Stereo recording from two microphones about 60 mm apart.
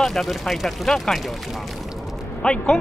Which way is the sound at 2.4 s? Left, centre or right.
Centre.